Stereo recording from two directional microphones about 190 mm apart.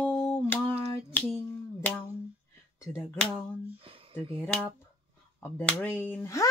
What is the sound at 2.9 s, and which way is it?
Speech, 10° left (ahead or behind).